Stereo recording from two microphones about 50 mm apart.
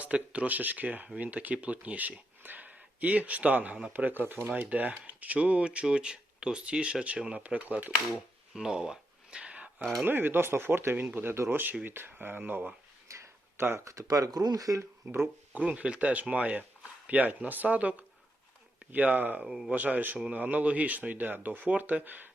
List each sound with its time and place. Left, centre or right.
0.0 s speech: right
8.1 s a sound: centre; by 9.8 s right
10.1 s speech: right
13.1 s a sound: right
13.7 s speech: right
14.8 s speech: right
15.5 s speech: right
19.5 s speech: centre
19.7 s speech: right